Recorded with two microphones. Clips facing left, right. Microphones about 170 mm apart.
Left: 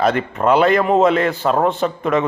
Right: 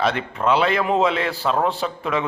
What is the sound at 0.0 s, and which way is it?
A man's voice, 50° left (ahead or behind).